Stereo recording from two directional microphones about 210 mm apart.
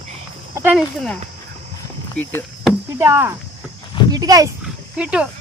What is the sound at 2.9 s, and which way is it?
A woman's voice, 10° right (ahead or behind).